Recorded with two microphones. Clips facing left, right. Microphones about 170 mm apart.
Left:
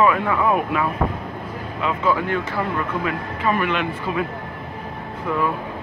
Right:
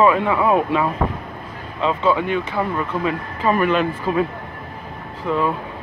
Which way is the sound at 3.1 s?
35° right (ahead or behind).